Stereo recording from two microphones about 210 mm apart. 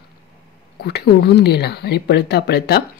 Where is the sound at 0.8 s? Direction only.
50° left (ahead or behind).